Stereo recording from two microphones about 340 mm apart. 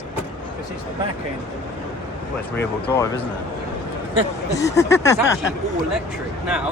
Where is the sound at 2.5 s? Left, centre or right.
Centre.